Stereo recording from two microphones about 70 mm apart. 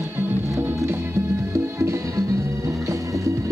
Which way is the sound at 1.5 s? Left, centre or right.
Right.